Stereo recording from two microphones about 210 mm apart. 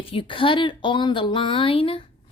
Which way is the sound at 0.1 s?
25° left (ahead or behind).